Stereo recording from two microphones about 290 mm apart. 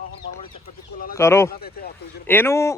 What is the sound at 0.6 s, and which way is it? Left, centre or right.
Speech, left.